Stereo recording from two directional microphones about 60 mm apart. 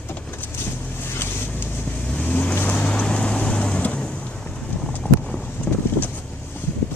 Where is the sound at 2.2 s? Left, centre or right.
Left.